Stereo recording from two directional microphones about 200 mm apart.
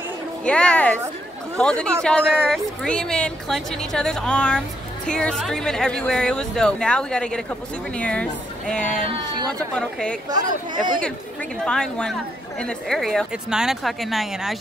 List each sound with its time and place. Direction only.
0.5 s a woman's voice: 5° left (ahead or behind)
10.3 s speech: 20° right (ahead or behind)
10.8 s speech: 40° right (ahead or behind)
11.6 s a woman's voice: 5° left (ahead or behind)